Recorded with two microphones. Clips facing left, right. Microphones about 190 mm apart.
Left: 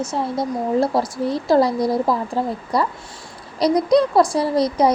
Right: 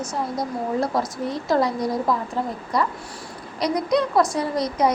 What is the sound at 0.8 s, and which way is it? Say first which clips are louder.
A woman's voice: left 4 dB; 30° left (ahead or behind).